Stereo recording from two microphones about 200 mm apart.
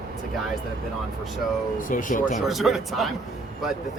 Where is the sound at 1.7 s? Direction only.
40° left (ahead or behind).